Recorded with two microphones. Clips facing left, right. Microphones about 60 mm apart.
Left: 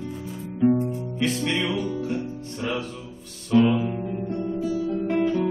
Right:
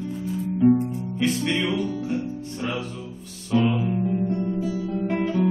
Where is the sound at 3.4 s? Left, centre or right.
Centre.